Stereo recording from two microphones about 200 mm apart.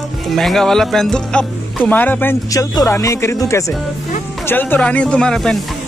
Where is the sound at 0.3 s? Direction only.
Centre (ahead or behind).